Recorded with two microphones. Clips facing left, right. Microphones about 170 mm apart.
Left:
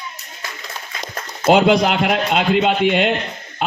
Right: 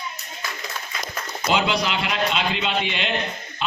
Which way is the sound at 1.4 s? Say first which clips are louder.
Left 9 dB; 55° left (ahead or behind).